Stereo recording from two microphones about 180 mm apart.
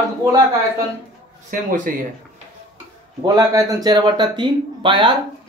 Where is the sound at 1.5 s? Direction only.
50° right (ahead or behind).